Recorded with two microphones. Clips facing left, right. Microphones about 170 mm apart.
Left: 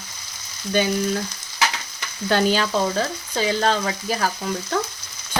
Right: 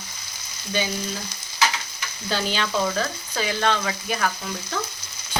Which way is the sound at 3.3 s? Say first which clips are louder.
Left 3 dB; 35° left (ahead or behind).